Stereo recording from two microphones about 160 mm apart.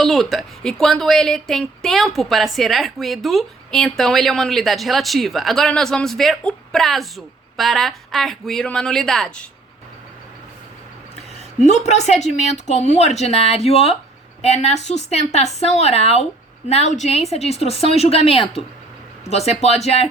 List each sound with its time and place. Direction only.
0.0 s a woman's voice: centre (ahead or behind)
11.9 s a woman's voice: 45° left (ahead or behind)